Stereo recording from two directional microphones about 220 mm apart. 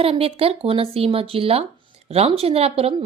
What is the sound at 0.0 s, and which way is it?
A woman's voice, 25° right (ahead or behind).